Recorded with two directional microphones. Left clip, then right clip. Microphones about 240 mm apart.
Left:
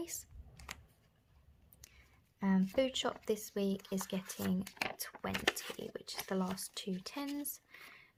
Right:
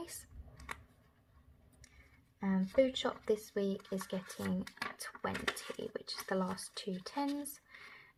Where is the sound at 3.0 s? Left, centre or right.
Left.